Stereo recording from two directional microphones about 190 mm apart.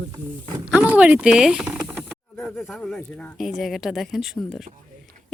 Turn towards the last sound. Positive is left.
turn(degrees=0)  # may be behind; listen again after turning